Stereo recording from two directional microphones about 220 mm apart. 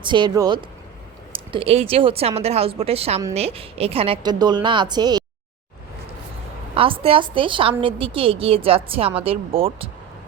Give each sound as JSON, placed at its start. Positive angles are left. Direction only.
{"t": 0.0, "sound": "a woman's voice", "side_deg": -20}
{"t": 6.7, "sound": "a woman's voice", "side_deg": -25}